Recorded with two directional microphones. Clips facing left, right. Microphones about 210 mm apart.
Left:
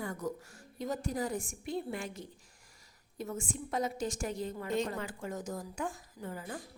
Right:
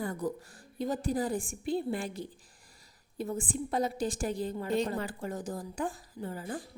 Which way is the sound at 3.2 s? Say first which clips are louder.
Right 5 dB; 35° right (ahead or behind).